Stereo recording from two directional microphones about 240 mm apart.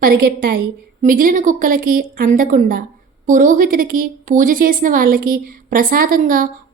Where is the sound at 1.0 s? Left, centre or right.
Right.